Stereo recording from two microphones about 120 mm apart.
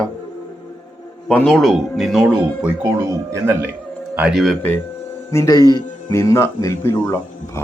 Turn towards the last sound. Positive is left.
turn(degrees=20)  # may be behind; listen again after turning